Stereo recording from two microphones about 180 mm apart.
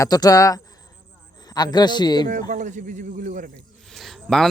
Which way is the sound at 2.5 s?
45° right (ahead or behind).